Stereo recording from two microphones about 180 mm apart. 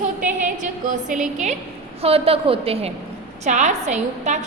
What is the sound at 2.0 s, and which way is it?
A woman's voice, 35° right (ahead or behind).